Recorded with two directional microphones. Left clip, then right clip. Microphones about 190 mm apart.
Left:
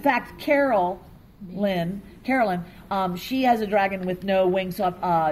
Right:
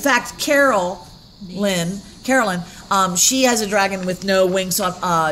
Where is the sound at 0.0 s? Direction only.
40° right (ahead or behind).